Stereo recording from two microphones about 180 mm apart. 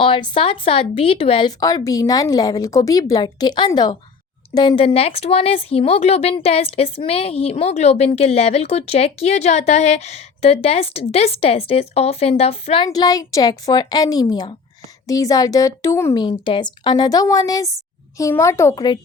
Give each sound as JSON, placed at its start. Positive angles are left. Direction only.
{"t": 0.0, "sound": "speech", "side_deg": 30}
{"t": 16.2, "sound": "a woman's voice", "side_deg": 25}